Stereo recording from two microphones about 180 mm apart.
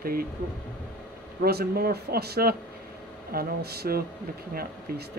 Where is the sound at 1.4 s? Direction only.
60° right (ahead or behind).